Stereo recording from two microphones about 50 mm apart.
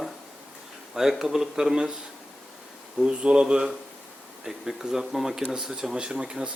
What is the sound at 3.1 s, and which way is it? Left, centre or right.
Speech, centre.